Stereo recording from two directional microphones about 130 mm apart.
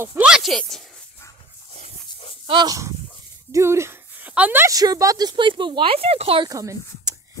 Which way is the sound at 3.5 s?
20° right (ahead or behind).